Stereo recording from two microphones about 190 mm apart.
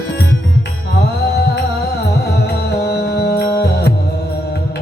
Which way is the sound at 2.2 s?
60° left (ahead or behind).